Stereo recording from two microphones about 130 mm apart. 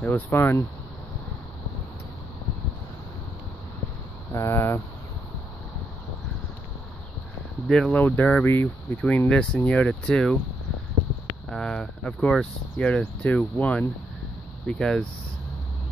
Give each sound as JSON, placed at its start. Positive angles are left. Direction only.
{"t": 0.0, "sound": "speech", "side_deg": 15}
{"t": 4.3, "sound": "speech", "side_deg": 20}
{"t": 7.6, "sound": "speech", "side_deg": 5}
{"t": 11.4, "sound": "speech", "side_deg": 5}